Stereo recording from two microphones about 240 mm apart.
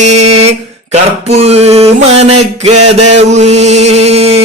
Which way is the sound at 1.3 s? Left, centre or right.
Right.